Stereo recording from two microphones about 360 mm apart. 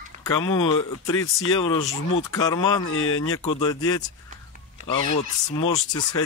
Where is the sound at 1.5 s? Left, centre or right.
Centre.